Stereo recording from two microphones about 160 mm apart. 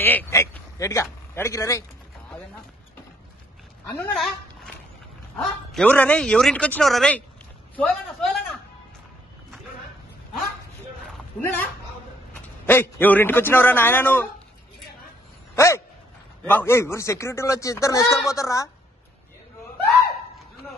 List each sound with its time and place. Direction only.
0.0 s a man's voice: 10° left (ahead or behind)
3.8 s a man's voice: 15° left (ahead or behind)
4.1 s speech: centre (ahead or behind)
11.4 s a man's voice: 10° left (ahead or behind)
15.5 s a sound: 15° left (ahead or behind)
16.4 s a man's voice: 15° left (ahead or behind)